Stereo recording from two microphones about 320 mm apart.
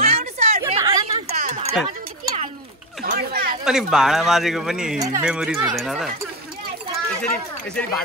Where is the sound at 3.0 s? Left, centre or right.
Right.